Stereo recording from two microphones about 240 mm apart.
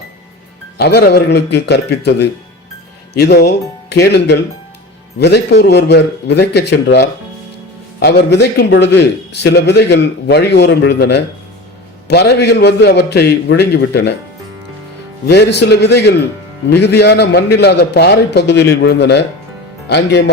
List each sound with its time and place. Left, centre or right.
0.8 s a man's voice: left
15.3 s a man's voice: left